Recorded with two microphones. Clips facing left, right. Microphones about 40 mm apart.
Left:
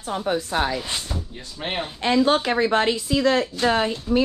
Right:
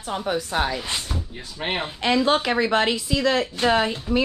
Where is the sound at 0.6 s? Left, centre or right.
Centre.